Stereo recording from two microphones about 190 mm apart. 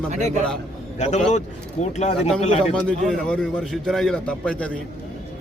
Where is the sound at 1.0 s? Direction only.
40° left (ahead or behind).